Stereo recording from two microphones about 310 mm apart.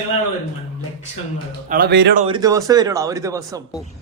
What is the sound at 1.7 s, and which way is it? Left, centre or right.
Speech, right.